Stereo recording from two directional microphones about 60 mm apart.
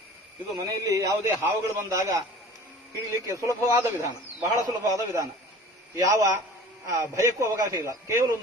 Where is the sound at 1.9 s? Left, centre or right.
Right.